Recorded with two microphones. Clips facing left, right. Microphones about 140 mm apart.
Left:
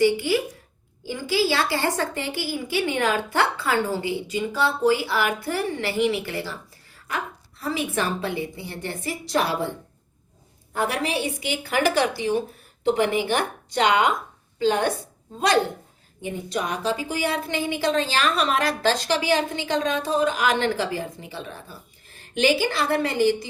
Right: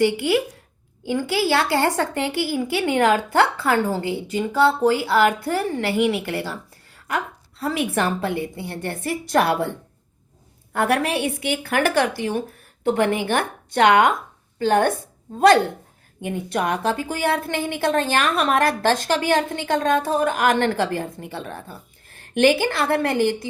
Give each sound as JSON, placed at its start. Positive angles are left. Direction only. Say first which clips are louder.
{"t": 0.0, "sound": "a woman's voice", "louder": "right 1 dB", "side_deg": -60}
{"t": 7.6, "sound": "a woman's voice", "louder": "right 3 dB", "side_deg": -65}
{"t": 16.2, "sound": "a woman's voice", "louder": "right 4 dB", "side_deg": -60}